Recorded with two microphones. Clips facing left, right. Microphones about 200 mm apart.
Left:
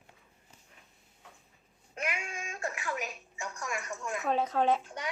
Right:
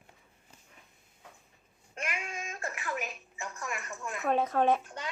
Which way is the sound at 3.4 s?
Centre (ahead or behind).